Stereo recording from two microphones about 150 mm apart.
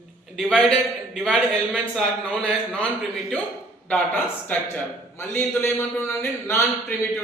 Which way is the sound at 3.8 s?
10° left (ahead or behind).